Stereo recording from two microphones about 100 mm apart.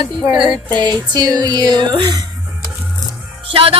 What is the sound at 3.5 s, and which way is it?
Music, 70° right (ahead or behind).